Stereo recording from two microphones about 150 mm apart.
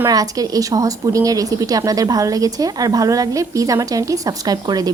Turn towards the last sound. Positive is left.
turn(degrees=-25)  # may be behind; listen again after turning